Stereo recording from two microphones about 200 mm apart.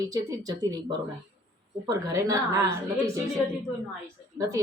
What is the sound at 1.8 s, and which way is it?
A woman's voice, 15° right (ahead or behind).